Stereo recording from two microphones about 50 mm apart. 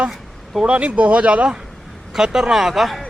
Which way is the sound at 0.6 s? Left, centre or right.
Right.